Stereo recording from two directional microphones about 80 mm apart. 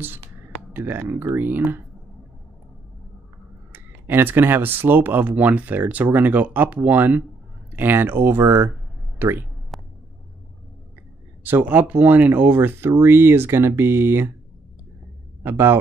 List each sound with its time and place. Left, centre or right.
0.7 s speech: right
3.7 s speech: right
9.7 s a sound: centre
11.4 s speech: right
15.4 s speech: right